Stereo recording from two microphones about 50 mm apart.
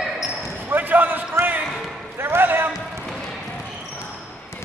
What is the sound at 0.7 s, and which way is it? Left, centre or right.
Basketball bounce, right.